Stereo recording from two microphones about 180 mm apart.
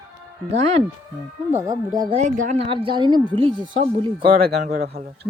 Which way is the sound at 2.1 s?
40° right (ahead or behind).